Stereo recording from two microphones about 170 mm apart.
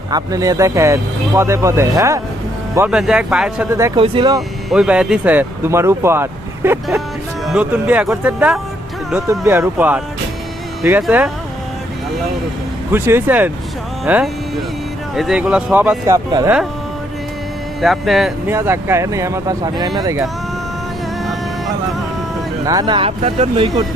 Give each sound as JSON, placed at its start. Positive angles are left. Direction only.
{"t": 0.1, "sound": "speech", "side_deg": -20}
{"t": 2.7, "sound": "speech", "side_deg": -10}
{"t": 3.7, "sound": "speech", "side_deg": -15}
{"t": 3.9, "sound": "speech", "side_deg": -30}
{"t": 4.4, "sound": "speech", "side_deg": -5}
{"t": 11.0, "sound": "speech", "side_deg": -10}
{"t": 12.9, "sound": "speech", "side_deg": -10}
{"t": 17.7, "sound": "speech", "side_deg": 0}
{"t": 18.4, "sound": "speech", "side_deg": -15}
{"t": 22.6, "sound": "speech", "side_deg": -20}